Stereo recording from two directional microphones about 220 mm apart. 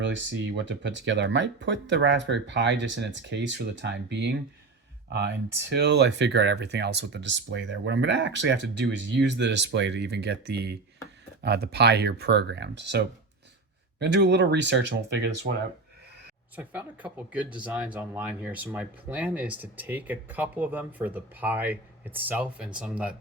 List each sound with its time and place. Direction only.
0.0 s speech: 55° right (ahead or behind)
14.0 s speech: 50° right (ahead or behind)
16.6 s speech: 5° right (ahead or behind)